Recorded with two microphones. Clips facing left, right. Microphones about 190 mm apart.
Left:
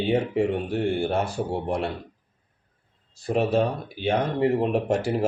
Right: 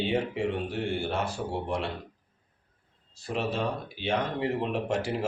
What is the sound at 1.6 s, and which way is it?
Speech, 50° left (ahead or behind).